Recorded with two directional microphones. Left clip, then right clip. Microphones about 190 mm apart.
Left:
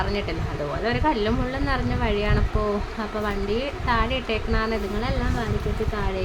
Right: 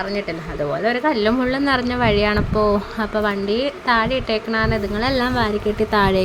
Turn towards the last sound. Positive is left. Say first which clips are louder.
# right 12 dB
turn(degrees=-55)  # may be behind; listen again after turning